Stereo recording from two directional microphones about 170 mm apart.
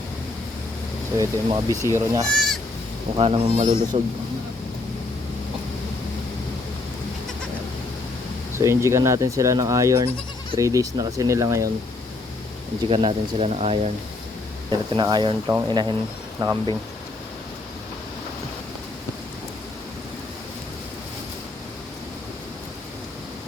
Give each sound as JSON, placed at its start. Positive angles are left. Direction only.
{"t": 1.2, "sound": "speech", "side_deg": -20}
{"t": 2.3, "sound": "bleat", "side_deg": 0}
{"t": 3.2, "sound": "speech", "side_deg": -35}
{"t": 8.5, "sound": "speech", "side_deg": -15}
{"t": 12.9, "sound": "speech", "side_deg": -35}
{"t": 14.7, "sound": "speech", "side_deg": -25}